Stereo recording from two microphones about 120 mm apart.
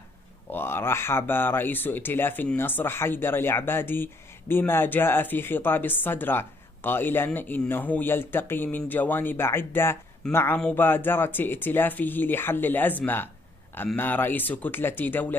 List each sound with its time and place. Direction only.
0.5 s speech: 20° left (ahead or behind)